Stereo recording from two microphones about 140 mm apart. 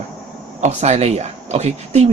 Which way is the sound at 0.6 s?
55° right (ahead or behind).